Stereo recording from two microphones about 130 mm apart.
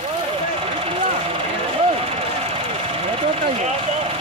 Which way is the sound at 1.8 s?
50° right (ahead or behind).